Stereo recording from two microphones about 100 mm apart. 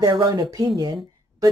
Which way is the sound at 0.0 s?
45° right (ahead or behind).